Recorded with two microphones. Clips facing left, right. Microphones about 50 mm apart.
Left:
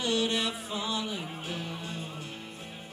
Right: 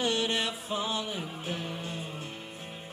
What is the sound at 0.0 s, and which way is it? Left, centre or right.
Music, right.